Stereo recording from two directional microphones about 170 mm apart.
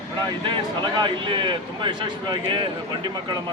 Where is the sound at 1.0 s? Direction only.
30° right (ahead or behind).